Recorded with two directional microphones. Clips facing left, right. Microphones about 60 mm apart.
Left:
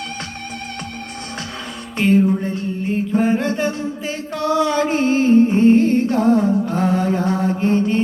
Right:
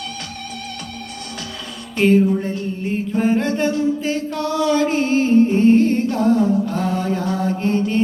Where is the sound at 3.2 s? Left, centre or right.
Centre.